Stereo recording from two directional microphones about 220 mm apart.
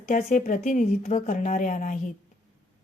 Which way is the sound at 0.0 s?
35° left (ahead or behind).